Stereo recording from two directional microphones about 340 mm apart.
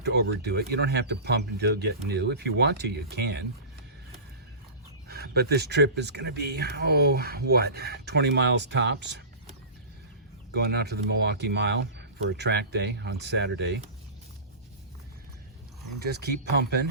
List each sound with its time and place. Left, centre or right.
0.0 s speech: right
5.0 s speech: right
10.5 s speech: right
16.0 s speech: right